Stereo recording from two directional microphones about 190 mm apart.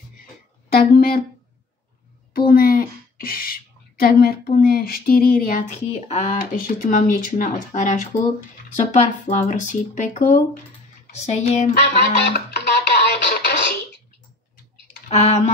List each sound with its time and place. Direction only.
0.7 s speech: 50° left (ahead or behind)
2.3 s speech: 50° left (ahead or behind)
11.8 s music: 60° left (ahead or behind)
15.0 s speech: 35° left (ahead or behind)